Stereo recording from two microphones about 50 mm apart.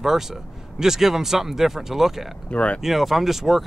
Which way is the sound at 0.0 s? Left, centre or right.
Centre.